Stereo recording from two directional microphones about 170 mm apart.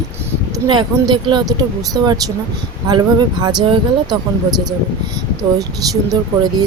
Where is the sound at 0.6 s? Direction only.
25° right (ahead or behind).